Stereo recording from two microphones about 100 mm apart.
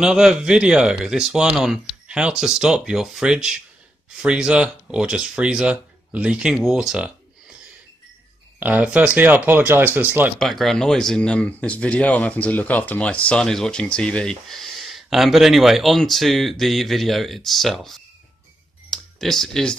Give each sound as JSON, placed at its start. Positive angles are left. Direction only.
{"t": 0.0, "sound": "speech", "side_deg": -5}
{"t": 8.5, "sound": "speech", "side_deg": -15}
{"t": 10.4, "sound": "speech", "side_deg": 0}
{"t": 18.9, "sound": "clicking", "side_deg": 5}